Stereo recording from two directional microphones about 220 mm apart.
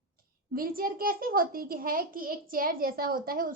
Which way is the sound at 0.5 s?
40° right (ahead or behind).